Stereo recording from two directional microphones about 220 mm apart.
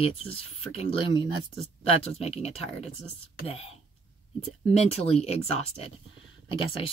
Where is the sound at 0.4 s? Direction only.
25° left (ahead or behind).